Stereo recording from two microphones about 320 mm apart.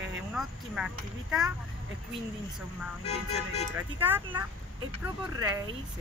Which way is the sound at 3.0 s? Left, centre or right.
Centre.